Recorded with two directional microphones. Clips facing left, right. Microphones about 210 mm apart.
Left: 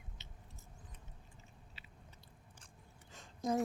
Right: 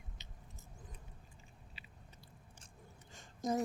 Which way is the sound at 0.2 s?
15° right (ahead or behind).